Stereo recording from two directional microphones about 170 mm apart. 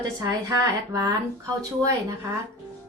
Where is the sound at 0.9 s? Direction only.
20° right (ahead or behind).